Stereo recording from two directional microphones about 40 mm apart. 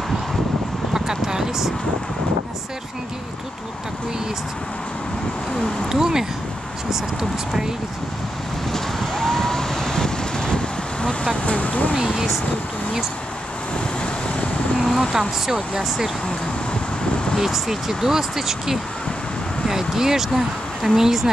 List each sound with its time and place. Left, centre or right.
0.9 s a sound: centre
5.9 s speech: centre
8.7 s vehicle: centre; by 11.9 s left
14.0 s vehicle: left
14.8 s a sound: centre
15.1 s speech: centre
17.4 s speech: centre